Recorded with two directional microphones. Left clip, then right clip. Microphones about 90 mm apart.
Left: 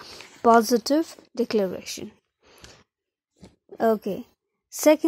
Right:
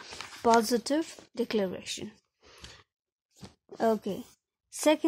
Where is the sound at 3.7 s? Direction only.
20° left (ahead or behind).